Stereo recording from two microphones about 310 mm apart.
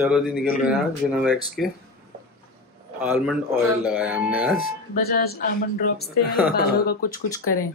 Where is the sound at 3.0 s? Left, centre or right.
Centre.